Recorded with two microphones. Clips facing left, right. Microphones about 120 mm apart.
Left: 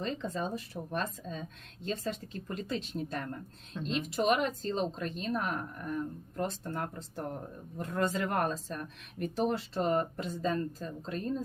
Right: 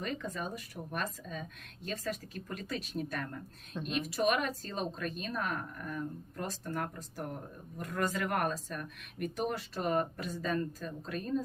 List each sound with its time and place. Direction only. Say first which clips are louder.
0.0 s speech: left 3 dB; 25° left (ahead or behind)